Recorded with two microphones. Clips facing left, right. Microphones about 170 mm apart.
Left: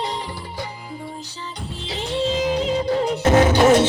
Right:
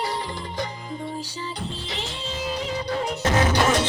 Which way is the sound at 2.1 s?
90° left.